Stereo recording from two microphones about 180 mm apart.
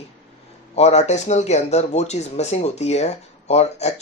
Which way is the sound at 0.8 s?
40° left (ahead or behind).